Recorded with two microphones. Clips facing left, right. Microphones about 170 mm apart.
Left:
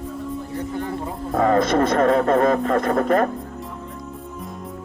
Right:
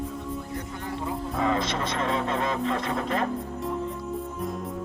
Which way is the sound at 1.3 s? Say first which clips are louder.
Left 10 dB; 50° left (ahead or behind).